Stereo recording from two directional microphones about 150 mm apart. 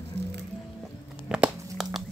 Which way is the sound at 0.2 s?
90° right.